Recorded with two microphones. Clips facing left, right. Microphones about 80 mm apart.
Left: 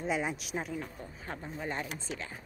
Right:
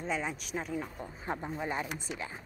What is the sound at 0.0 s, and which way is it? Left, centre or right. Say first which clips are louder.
Speech: left 2 dB; centre.